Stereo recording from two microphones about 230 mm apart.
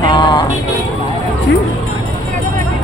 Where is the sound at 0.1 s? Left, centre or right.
Centre.